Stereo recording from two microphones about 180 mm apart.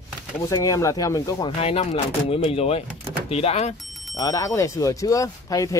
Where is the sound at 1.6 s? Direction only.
35° left (ahead or behind).